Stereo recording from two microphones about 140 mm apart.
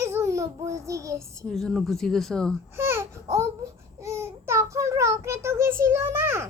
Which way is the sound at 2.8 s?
20° right (ahead or behind).